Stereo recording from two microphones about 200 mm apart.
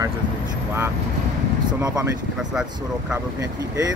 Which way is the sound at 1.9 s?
5° right (ahead or behind).